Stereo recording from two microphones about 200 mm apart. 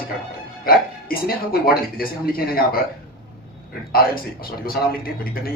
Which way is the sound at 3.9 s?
45° left (ahead or behind).